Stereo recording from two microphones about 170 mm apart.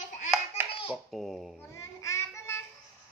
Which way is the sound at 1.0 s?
Centre (ahead or behind).